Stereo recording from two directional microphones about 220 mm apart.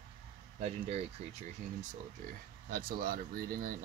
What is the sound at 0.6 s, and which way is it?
Speech, 30° right (ahead or behind).